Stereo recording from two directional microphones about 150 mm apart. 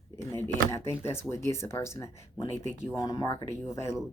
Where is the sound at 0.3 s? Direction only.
15° left (ahead or behind).